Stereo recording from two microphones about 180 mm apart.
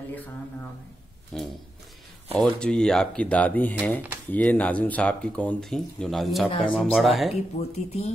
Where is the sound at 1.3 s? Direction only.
5° left (ahead or behind).